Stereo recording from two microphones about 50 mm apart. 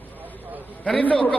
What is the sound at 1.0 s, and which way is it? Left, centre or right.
Speech, left.